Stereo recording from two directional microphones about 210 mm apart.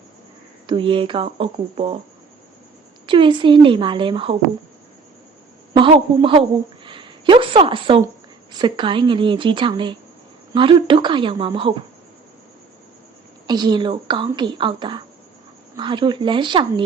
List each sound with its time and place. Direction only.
0.7 s speech: 25° right (ahead or behind)
3.1 s speech: 25° right (ahead or behind)
5.7 s speech: 25° right (ahead or behind)
13.5 s speech: 20° right (ahead or behind)